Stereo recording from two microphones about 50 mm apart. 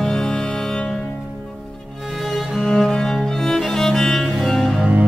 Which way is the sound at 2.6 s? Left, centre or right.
Centre.